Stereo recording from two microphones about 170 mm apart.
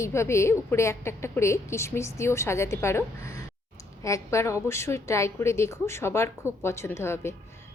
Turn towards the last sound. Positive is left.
turn(degrees=15)  # may be behind; listen again after turning